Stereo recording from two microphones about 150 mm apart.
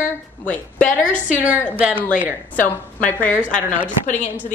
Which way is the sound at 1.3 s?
10° right (ahead or behind).